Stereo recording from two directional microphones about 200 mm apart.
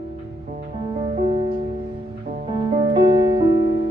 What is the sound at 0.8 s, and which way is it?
Music, 25° right (ahead or behind).